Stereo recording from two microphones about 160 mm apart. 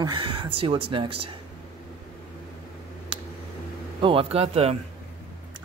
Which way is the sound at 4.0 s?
35° right (ahead or behind).